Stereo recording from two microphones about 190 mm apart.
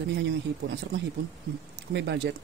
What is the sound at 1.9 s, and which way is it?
Speech, 60° right (ahead or behind).